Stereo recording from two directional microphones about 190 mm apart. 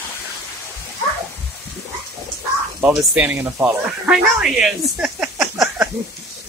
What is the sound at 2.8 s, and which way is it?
Speech, 10° right (ahead or behind).